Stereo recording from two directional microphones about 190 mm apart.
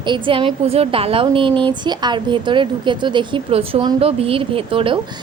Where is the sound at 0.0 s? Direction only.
25° right (ahead or behind).